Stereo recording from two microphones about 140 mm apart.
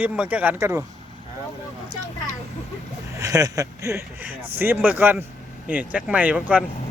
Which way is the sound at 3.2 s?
25° right (ahead or behind).